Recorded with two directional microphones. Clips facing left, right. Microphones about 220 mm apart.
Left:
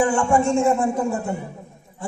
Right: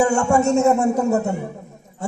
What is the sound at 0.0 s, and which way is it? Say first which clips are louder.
A man's voice: right 2 dB; 40° right (ahead or behind).